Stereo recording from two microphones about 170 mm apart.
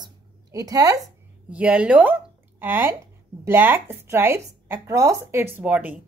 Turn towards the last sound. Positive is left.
turn(degrees=-5)  # may be behind; listen again after turning